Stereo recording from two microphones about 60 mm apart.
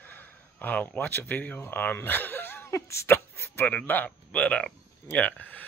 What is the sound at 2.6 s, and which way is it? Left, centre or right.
Speech, left.